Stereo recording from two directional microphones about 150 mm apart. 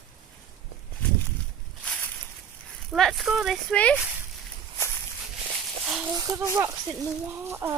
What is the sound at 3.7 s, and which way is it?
Speech, 10° left (ahead or behind).